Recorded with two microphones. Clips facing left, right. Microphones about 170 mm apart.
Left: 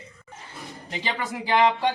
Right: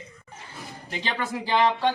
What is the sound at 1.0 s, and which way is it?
Speech, 15° left (ahead or behind).